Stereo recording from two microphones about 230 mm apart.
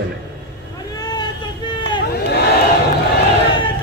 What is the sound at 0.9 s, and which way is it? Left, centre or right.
Vehicle, centre.